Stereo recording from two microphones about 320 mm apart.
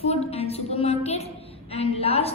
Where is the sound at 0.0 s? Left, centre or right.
Centre.